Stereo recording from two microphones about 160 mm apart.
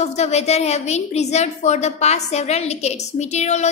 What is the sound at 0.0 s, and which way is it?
A woman's voice, 45° left (ahead or behind).